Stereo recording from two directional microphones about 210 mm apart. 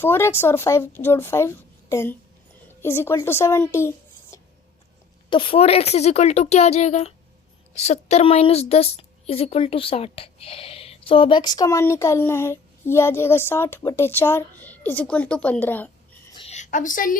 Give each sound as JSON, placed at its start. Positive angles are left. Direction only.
{"t": 0.0, "sound": "a woman's voice", "side_deg": 10}
{"t": 5.3, "sound": "a woman's voice", "side_deg": 25}
{"t": 16.3, "sound": "a sound", "side_deg": 30}